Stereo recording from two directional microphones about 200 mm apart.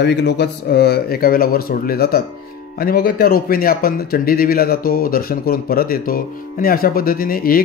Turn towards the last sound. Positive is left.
turn(degrees=45)  # may be behind; listen again after turning